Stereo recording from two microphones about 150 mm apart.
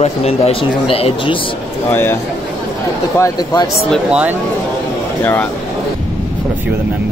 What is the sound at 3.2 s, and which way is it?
Speech, 25° left (ahead or behind).